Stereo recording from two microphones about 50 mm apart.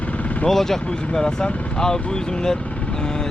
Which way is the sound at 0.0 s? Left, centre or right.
Left.